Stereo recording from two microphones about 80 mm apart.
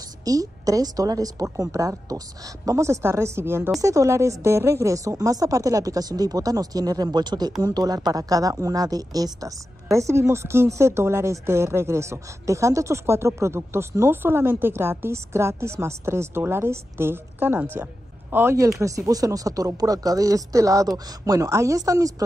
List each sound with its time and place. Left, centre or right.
0.2 s speech: right
3.8 s a woman's voice: right
18.8 s speech: right